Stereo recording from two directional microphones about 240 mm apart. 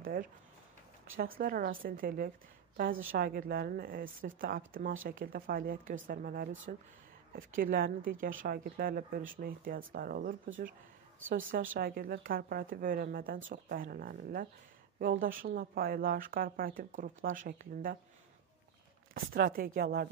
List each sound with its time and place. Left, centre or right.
0.0 s speech: right
19.1 s speech: right